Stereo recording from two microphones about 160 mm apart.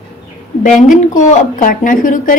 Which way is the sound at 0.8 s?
50° left (ahead or behind).